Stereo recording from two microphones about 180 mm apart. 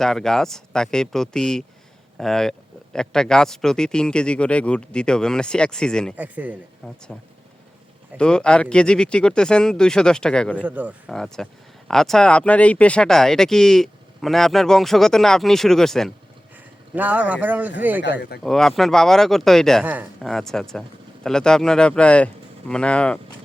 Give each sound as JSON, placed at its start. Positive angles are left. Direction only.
{"t": 0.0, "sound": "speech", "side_deg": 0}
{"t": 6.1, "sound": "speech", "side_deg": -10}
{"t": 6.8, "sound": "speech", "side_deg": 5}
{"t": 8.2, "sound": "speech", "side_deg": 5}
{"t": 10.6, "sound": "speech", "side_deg": -10}
{"t": 11.1, "sound": "speech", "side_deg": 5}
{"t": 16.9, "sound": "speech", "side_deg": -10}
{"t": 18.0, "sound": "speech", "side_deg": 70}
{"t": 18.4, "sound": "speech", "side_deg": 0}
{"t": 19.8, "sound": "speech", "side_deg": -10}
{"t": 20.2, "sound": "speech", "side_deg": 0}